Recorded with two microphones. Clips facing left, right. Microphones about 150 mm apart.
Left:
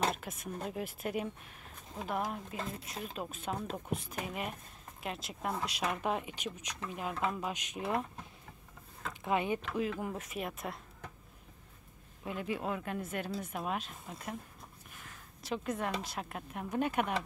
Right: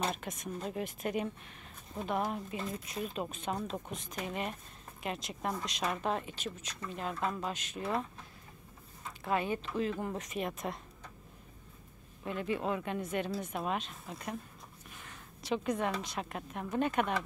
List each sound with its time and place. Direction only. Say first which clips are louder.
0.1 s speech: right 1 dB; 5° left (ahead or behind)
9.2 s speech: even; 15° left (ahead or behind)
12.3 s a woman's voice: right 2 dB; 5° left (ahead or behind)